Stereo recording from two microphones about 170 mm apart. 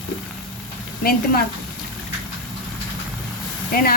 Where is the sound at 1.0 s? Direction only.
60° left (ahead or behind).